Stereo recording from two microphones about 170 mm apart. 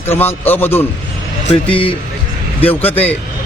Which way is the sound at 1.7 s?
30° left (ahead or behind).